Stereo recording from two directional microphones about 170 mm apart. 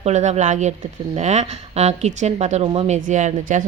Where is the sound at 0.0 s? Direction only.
45° right (ahead or behind).